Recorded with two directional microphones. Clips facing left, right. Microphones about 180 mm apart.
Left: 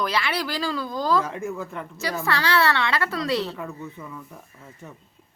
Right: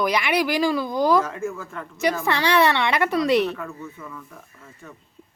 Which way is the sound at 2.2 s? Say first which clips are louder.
Right 2 dB; 20° right (ahead or behind).